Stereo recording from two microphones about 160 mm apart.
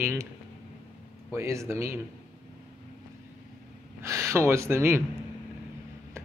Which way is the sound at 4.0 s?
15° right (ahead or behind).